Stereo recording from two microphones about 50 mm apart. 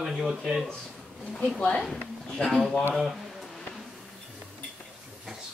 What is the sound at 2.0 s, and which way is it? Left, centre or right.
Speech, centre.